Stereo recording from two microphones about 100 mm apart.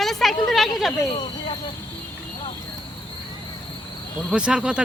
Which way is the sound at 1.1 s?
50° left (ahead or behind).